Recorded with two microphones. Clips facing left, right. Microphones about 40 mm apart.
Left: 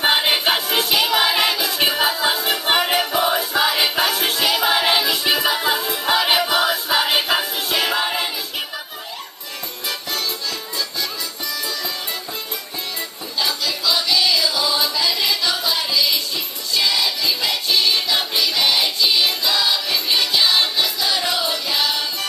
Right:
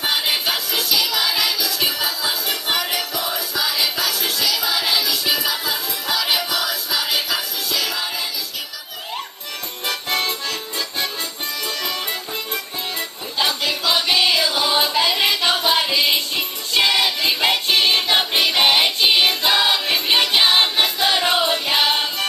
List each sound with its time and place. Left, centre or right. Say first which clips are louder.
0.0 s music: left 4 dB; left
9.8 s music: right 3 dB; right
13.4 s music: right 2 dB; right